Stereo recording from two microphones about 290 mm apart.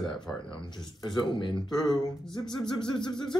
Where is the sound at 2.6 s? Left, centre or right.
Centre.